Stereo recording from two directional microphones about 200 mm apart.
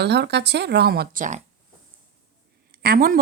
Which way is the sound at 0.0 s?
60° right (ahead or behind).